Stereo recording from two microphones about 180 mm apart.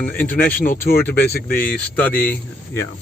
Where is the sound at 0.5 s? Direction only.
50° left (ahead or behind).